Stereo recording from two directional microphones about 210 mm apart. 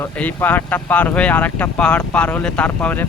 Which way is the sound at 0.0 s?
10° left (ahead or behind).